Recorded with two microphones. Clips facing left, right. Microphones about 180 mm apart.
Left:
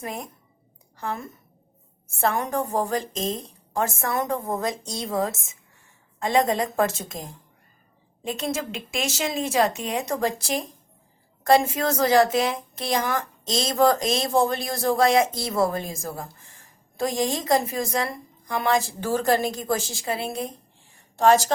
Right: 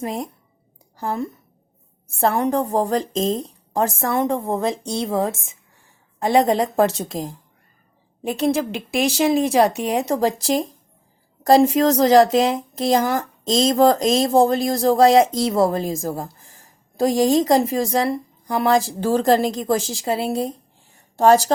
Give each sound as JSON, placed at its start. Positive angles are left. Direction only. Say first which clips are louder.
{"t": 0.0, "sound": "speech", "louder": "right 7 dB", "side_deg": -35}
{"t": 8.4, "sound": "a woman's voice", "louder": "right 10 dB", "side_deg": -35}